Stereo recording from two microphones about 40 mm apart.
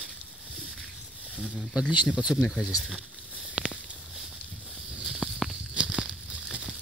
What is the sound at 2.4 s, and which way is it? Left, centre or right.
Speech, centre.